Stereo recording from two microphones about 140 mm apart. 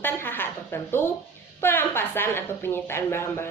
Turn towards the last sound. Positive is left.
turn(degrees=15)  # may be behind; listen again after turning